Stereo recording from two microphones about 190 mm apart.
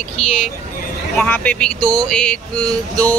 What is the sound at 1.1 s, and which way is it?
Speech, 5° left (ahead or behind).